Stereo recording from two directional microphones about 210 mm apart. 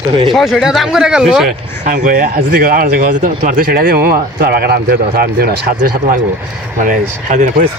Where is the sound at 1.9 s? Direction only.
40° right (ahead or behind).